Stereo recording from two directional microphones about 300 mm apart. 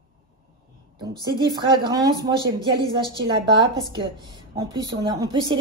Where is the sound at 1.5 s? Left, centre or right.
Centre.